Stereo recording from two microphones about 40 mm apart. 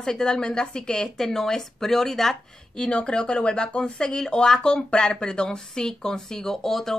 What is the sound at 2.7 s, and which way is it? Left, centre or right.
A woman's voice, left.